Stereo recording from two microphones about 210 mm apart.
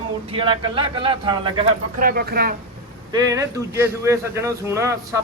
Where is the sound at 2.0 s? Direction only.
45° right (ahead or behind).